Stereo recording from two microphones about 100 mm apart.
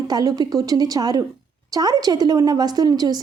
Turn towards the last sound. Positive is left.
turn(degrees=-40)  # may be behind; listen again after turning